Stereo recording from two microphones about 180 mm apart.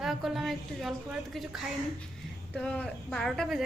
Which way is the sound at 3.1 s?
5° left (ahead or behind).